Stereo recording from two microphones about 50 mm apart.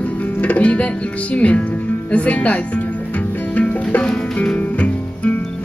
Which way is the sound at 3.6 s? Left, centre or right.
Left.